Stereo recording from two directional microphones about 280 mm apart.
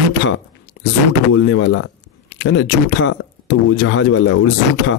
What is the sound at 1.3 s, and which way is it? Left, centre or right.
Speech, left.